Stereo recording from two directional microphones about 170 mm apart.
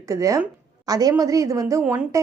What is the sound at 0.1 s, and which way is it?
A woman's voice, 20° right (ahead or behind).